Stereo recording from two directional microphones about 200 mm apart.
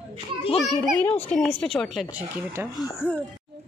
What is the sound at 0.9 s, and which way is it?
A child's voice, 10° left (ahead or behind).